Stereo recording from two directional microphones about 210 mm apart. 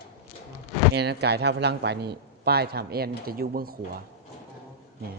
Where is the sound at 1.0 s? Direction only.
50° right (ahead or behind).